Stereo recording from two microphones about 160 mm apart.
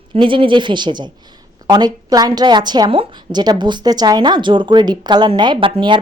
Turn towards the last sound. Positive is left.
turn(degrees=-30)  # may be behind; listen again after turning